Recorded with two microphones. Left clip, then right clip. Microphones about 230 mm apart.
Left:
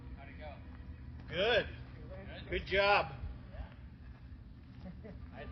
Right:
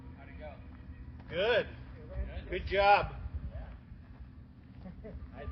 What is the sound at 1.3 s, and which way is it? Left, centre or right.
Speech, centre.